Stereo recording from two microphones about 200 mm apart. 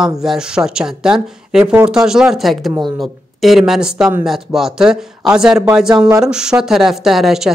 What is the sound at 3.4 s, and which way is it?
A man's voice, centre (ahead or behind).